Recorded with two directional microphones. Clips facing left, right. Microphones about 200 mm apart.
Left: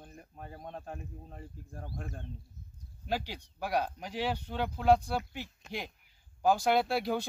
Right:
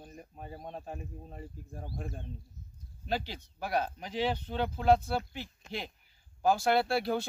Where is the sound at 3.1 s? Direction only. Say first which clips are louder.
Even; 10° left (ahead or behind).